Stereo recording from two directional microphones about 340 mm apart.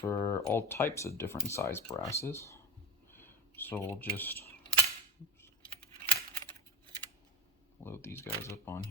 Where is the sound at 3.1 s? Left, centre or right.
Centre.